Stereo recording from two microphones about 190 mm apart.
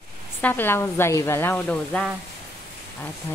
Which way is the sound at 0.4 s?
10° left (ahead or behind).